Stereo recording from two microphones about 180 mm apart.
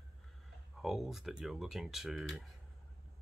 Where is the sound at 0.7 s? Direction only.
Centre (ahead or behind).